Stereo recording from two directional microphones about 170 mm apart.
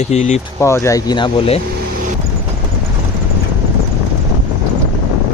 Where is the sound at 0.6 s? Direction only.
15° left (ahead or behind); by 1.6 s 35° left (ahead or behind).